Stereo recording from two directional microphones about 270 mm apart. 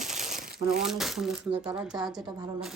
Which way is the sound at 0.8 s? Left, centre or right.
Centre.